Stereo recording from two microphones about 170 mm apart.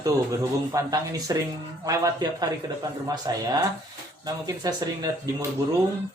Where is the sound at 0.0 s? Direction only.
20° right (ahead or behind).